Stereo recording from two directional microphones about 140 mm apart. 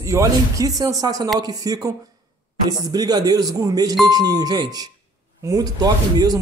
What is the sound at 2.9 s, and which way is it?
Speech, 30° right (ahead or behind).